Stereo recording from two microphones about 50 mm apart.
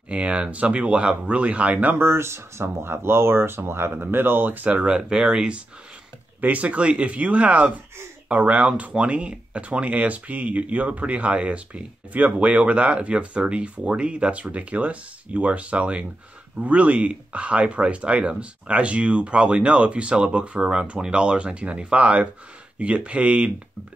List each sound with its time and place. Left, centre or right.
0.1 s speech: right
2.0 s speech: right
4.6 s speech: right
6.4 s speech: right